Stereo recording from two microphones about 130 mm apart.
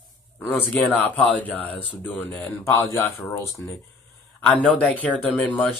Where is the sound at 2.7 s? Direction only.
20° left (ahead or behind).